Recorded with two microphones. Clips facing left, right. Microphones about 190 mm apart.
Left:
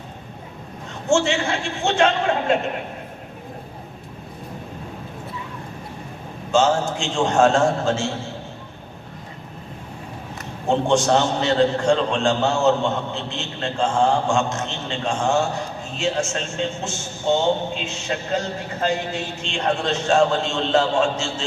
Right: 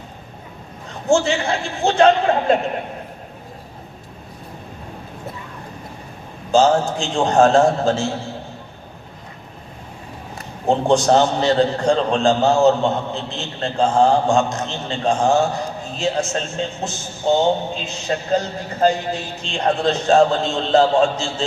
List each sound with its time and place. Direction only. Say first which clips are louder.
1.0 s a man's voice: right 2 dB; 35° right (ahead or behind)
6.5 s a man's voice: right 3 dB; 35° right (ahead or behind)
10.7 s a man's voice: right 3 dB; 35° right (ahead or behind)